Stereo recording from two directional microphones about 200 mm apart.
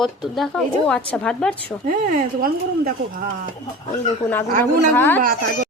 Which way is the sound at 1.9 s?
40° right (ahead or behind).